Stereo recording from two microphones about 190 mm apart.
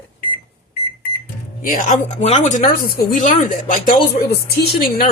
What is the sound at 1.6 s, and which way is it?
Speech, 40° left (ahead or behind).